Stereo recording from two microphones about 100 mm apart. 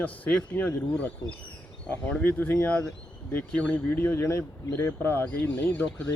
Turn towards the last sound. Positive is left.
turn(degrees=15)  # may be behind; listen again after turning